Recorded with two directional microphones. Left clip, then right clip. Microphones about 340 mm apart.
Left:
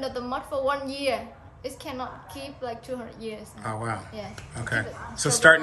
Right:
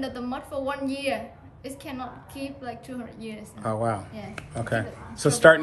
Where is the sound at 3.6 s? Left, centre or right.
Centre.